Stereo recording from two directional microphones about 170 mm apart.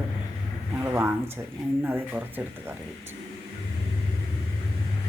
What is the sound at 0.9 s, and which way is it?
Speech, 15° right (ahead or behind).